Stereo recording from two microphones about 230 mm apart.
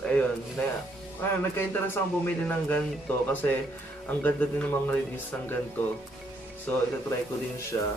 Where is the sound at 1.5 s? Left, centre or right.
Centre.